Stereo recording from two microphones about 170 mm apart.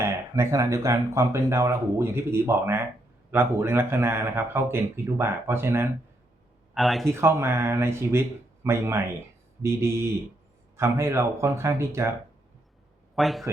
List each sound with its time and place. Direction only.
0.0 s speech: 15° right (ahead or behind)
6.7 s speech: centre (ahead or behind)
7.1 s speech: 15° right (ahead or behind)
13.1 s a man's voice: centre (ahead or behind)